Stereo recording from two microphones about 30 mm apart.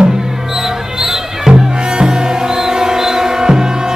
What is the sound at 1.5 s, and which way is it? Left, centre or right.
Music, right.